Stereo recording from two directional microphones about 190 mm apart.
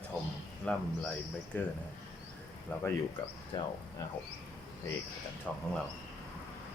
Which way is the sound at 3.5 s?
20° left (ahead or behind).